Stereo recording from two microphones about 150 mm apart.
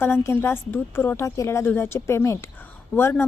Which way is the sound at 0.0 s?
15° left (ahead or behind).